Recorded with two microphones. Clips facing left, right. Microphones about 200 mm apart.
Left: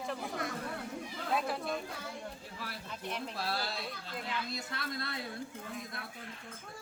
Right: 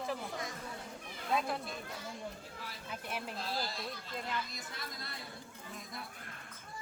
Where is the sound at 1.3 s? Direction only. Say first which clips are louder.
Even; centre (ahead or behind).